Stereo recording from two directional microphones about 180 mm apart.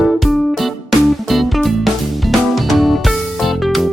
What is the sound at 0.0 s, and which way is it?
Music, centre (ahead or behind).